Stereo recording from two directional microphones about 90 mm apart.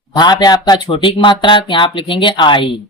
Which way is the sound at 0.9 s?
65° left (ahead or behind).